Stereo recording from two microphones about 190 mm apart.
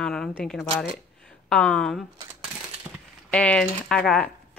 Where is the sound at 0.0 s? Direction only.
Centre (ahead or behind).